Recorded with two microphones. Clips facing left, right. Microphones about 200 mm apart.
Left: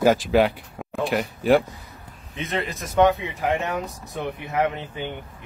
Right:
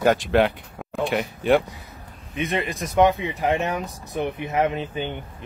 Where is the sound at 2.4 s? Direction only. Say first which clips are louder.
Right 2 dB; 15° right (ahead or behind).